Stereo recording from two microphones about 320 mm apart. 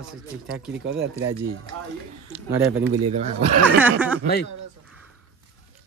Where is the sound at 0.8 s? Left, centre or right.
Right.